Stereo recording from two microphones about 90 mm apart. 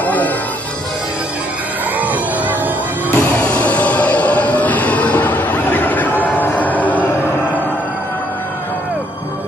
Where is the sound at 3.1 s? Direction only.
20° left (ahead or behind).